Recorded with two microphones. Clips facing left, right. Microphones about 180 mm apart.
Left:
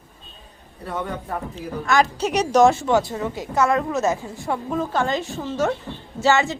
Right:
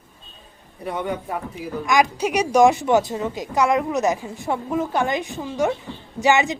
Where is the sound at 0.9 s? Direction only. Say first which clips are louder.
Right 2 dB; 15° right (ahead or behind).